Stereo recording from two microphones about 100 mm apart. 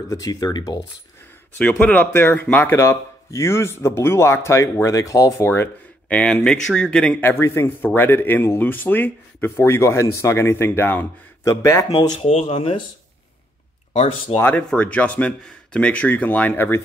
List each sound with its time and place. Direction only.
0.1 s speech: 35° left (ahead or behind)
1.6 s speech: 15° left (ahead or behind); by 5.3 s 35° left (ahead or behind)
5.4 s speech: 20° left (ahead or behind)
7.2 s speech: 25° left (ahead or behind)
12.2 s speech: 90° left; by 12.8 s 65° left (ahead or behind)
14.5 s speech: 15° left (ahead or behind)